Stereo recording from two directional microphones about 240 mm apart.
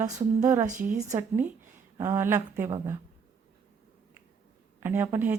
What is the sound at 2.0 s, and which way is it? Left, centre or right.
Speech, centre.